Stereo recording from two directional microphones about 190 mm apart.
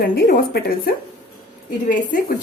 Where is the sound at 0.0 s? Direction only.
50° left (ahead or behind).